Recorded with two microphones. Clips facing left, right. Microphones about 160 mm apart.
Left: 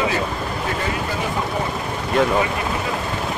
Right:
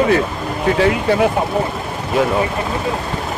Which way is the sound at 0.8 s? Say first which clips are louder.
Right 10 dB; 70° right (ahead or behind).